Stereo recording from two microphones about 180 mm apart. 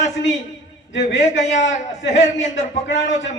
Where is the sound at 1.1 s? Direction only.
40° left (ahead or behind).